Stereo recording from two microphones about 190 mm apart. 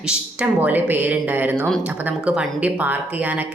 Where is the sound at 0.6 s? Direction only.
10° right (ahead or behind).